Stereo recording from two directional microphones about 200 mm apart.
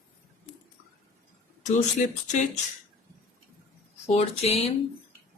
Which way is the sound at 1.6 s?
35° left (ahead or behind).